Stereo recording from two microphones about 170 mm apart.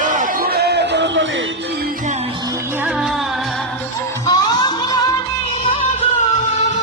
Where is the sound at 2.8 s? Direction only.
Centre (ahead or behind).